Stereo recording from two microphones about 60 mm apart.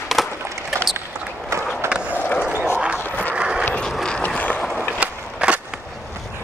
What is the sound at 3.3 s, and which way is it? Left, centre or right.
Vehicle, centre.